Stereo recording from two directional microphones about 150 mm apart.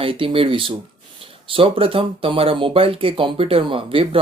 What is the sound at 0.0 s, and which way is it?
Speech, 35° right (ahead or behind).